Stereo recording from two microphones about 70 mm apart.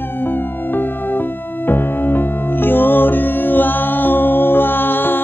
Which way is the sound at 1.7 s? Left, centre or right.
Left.